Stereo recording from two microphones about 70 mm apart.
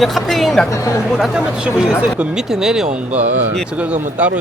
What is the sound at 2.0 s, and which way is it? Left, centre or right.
Speech, centre.